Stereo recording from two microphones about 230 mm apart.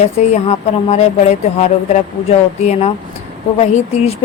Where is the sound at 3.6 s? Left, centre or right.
Left.